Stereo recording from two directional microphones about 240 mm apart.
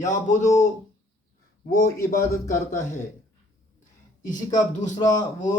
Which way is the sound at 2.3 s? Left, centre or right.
Left.